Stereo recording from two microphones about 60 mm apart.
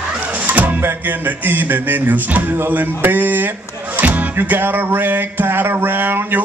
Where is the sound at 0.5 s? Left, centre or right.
Right.